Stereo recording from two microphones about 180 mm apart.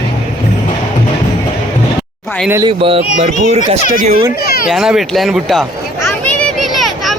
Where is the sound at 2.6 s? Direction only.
30° right (ahead or behind).